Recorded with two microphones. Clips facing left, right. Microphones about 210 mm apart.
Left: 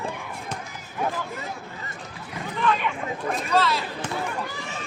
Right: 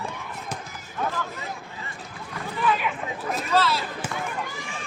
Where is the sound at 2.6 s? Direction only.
5° right (ahead or behind).